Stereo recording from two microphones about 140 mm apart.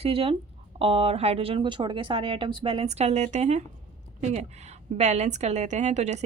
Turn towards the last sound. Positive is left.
turn(degrees=-55)  # may be behind; listen again after turning